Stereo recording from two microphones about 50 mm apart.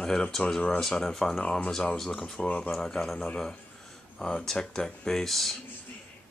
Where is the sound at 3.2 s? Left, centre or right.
Centre.